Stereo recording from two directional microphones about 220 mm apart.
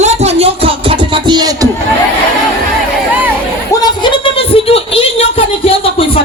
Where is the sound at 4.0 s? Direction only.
20° left (ahead or behind).